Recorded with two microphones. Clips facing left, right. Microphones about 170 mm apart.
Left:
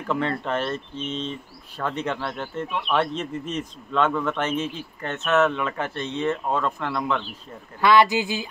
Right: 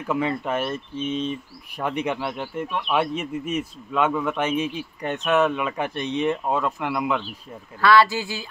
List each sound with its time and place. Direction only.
0.1 s a man's voice: 10° right (ahead or behind)
7.8 s speech: 20° left (ahead or behind)